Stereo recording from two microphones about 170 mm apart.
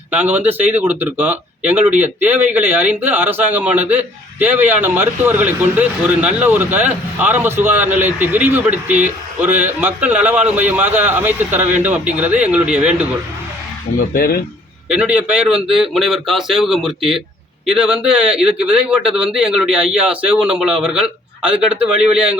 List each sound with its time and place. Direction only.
0.1 s speech: 10° right (ahead or behind)
14.1 s speech: 60° left (ahead or behind)
14.8 s a man's voice: 10° right (ahead or behind)